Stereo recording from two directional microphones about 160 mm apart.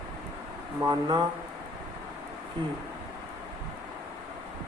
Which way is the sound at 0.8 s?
25° right (ahead or behind).